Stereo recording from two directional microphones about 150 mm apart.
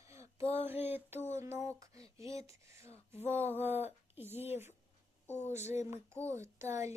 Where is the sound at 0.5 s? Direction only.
15° right (ahead or behind).